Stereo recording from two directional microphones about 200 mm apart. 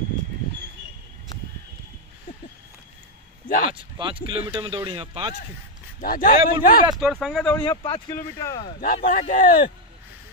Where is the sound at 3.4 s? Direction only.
45° left (ahead or behind).